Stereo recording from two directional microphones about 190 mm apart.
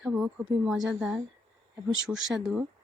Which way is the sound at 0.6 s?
Centre (ahead or behind).